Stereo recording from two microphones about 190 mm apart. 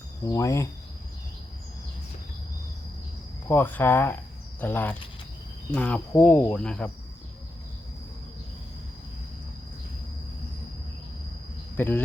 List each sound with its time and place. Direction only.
0.3 s speech: 15° left (ahead or behind)
3.5 s speech: 10° left (ahead or behind)
11.8 s speech: 10° left (ahead or behind)